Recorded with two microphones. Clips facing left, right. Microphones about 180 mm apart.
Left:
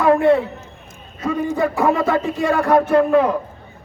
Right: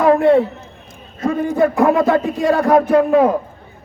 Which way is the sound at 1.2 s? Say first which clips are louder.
Right 4 dB; 40° right (ahead or behind).